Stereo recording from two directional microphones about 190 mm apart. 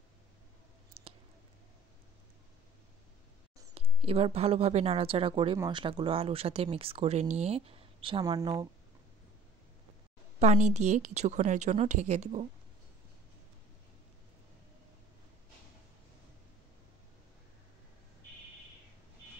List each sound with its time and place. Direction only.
1.0 s a sound: 30° right (ahead or behind)
3.7 s a woman's voice: 30° right (ahead or behind)
10.4 s a woman's voice: 35° right (ahead or behind)